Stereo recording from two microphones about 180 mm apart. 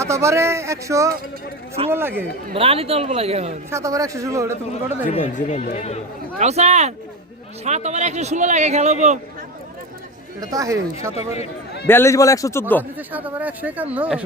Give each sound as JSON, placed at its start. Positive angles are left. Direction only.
{"t": 0.0, "sound": "speech", "side_deg": -15}
{"t": 2.5, "sound": "a man's voice", "side_deg": -35}
{"t": 3.7, "sound": "speech", "side_deg": -15}
{"t": 5.0, "sound": "speech", "side_deg": 45}
{"t": 6.4, "sound": "a man's voice", "side_deg": -40}
{"t": 10.4, "sound": "speech", "side_deg": -20}
{"t": 11.9, "sound": "a man's voice", "side_deg": 15}
{"t": 13.0, "sound": "speech", "side_deg": -10}